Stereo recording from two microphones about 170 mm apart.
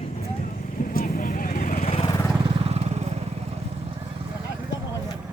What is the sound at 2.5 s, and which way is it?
Vehicle, 35° right (ahead or behind).